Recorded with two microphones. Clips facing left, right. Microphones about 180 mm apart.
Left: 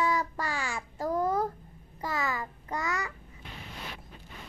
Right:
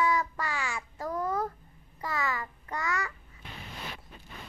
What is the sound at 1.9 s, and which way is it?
Child singing, 20° left (ahead or behind).